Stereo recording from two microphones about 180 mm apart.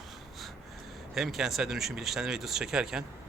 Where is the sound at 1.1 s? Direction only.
Centre (ahead or behind).